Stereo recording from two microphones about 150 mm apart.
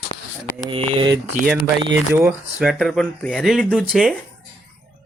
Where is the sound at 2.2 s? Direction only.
5° right (ahead or behind).